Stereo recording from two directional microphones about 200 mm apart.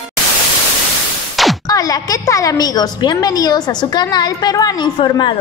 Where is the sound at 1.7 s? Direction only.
15° left (ahead or behind).